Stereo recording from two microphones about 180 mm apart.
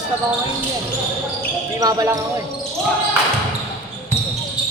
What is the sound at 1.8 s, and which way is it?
Speech, 20° right (ahead or behind).